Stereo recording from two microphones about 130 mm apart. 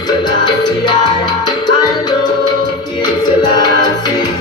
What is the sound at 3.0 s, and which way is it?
Music, 30° left (ahead or behind).